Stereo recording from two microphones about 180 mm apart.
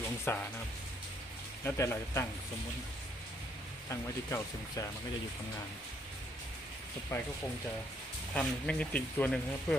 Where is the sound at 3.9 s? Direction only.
15° left (ahead or behind).